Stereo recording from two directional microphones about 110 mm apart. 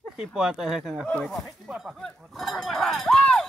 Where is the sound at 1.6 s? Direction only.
10° right (ahead or behind).